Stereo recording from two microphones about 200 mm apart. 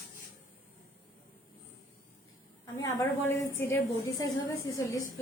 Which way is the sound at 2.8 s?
15° left (ahead or behind).